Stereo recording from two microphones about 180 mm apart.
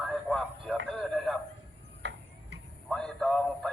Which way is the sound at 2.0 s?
75° right (ahead or behind).